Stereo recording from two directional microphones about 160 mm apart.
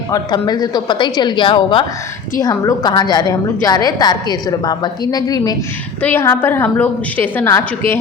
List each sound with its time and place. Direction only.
0.1 s a woman's voice: 25° left (ahead or behind)
6.0 s a woman's voice: 15° left (ahead or behind)